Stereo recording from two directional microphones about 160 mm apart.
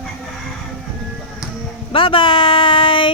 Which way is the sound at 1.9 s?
35° left (ahead or behind).